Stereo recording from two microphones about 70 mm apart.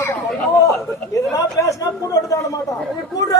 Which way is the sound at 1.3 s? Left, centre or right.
Left.